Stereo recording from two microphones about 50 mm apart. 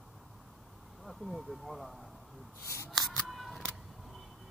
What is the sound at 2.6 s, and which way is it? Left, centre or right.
Scissors, left.